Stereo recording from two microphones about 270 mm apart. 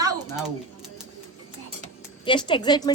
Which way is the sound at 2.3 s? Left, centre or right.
Centre.